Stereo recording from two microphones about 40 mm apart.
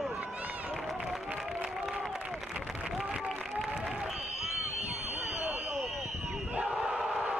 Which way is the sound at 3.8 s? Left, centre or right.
Centre.